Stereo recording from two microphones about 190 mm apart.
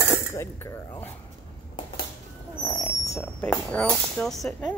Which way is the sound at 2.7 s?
10° left (ahead or behind).